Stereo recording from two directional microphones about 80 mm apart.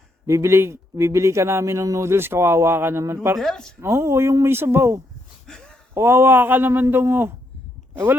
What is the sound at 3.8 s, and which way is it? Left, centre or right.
Speech, right.